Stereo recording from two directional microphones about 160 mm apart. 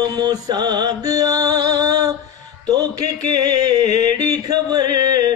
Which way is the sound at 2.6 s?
25° right (ahead or behind).